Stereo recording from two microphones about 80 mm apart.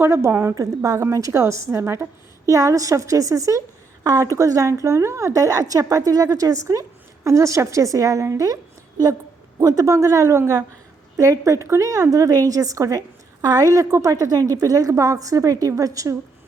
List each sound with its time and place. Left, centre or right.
0.0 s a woman's voice: right
0.5 s a woman's voice: right
9.6 s a woman's voice: right